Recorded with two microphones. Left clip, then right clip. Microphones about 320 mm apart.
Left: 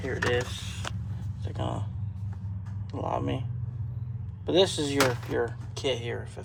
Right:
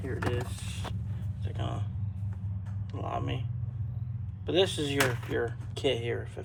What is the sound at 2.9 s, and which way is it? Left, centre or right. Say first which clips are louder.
Speech: left 5 dB; centre.